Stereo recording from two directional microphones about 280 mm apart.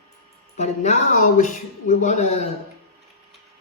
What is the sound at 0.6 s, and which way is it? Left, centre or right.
Speech, left.